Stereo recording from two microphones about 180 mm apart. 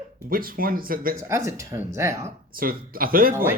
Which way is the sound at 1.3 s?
15° right (ahead or behind).